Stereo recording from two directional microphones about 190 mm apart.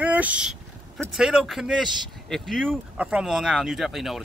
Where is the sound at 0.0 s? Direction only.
10° right (ahead or behind).